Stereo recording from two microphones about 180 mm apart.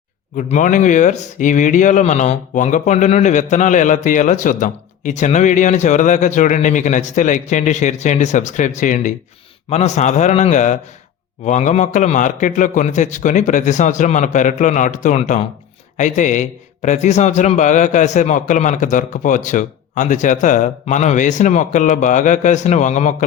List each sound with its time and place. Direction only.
0.3 s a man's voice: 45° left (ahead or behind)